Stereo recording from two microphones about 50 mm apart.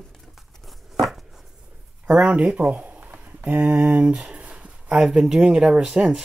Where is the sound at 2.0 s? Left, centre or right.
Right.